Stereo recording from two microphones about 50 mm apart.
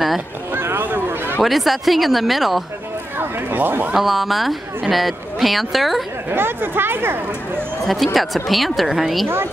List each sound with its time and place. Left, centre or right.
0.5 s a sound: right
0.8 s a sound: right
1.4 s speech: centre
3.2 s speech: right
3.9 s speech: centre
6.3 s speech: right
7.8 s speech: centre